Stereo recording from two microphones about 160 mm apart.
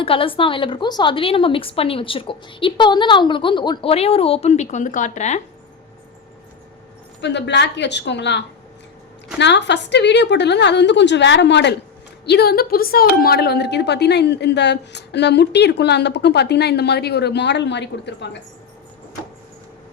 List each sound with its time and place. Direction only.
0.0 s a woman's voice: 35° left (ahead or behind)
7.2 s a woman's voice: 90° left